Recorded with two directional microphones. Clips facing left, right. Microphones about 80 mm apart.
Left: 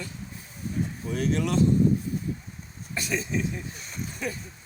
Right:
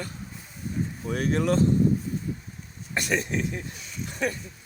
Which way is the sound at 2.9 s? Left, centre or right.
Right.